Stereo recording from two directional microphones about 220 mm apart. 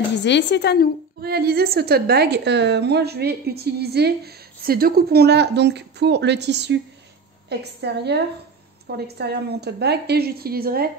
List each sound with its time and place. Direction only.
0.2 s a woman's voice: 50° left (ahead or behind)
1.2 s a woman's voice: 45° right (ahead or behind)